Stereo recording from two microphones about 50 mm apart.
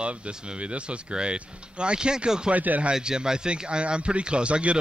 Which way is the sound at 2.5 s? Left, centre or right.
Right.